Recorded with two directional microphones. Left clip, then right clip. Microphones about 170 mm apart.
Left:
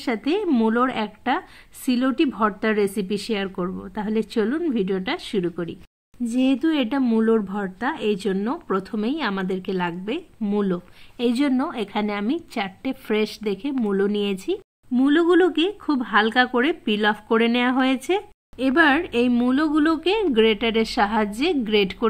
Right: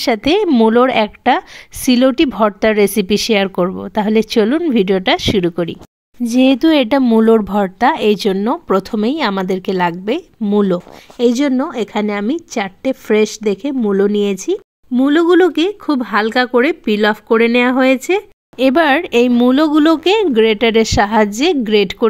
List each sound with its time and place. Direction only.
0.0 s a woman's voice: 60° right (ahead or behind)
0.5 s speech: 40° right (ahead or behind)
0.7 s a woman's voice: 55° right (ahead or behind); by 18.2 s 30° right (ahead or behind)
18.6 s a woman's voice: 55° right (ahead or behind)